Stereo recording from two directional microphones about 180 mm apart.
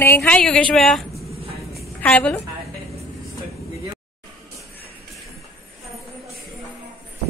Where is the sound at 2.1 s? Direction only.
10° left (ahead or behind).